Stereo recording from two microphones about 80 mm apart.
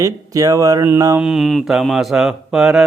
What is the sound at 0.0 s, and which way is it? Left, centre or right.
Speech, right.